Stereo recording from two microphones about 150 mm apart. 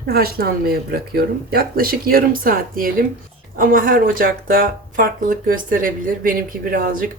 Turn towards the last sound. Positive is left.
turn(degrees=-70)  # may be behind; listen again after turning